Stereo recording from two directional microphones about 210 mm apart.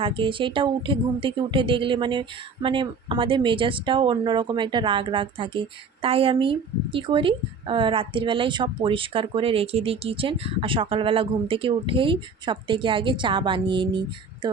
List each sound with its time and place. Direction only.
0.0 s a woman's voice: 25° right (ahead or behind)